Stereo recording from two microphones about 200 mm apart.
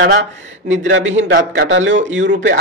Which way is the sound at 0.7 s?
70° right (ahead or behind).